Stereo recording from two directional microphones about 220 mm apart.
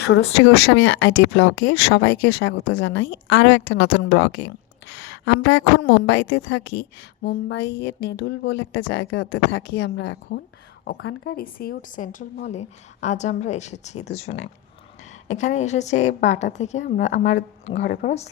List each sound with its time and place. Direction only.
0.1 s a woman's voice: 55° left (ahead or behind); by 17.9 s 30° left (ahead or behind)